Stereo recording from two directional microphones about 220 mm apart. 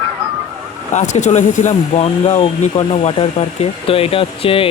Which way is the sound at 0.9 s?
35° left (ahead or behind).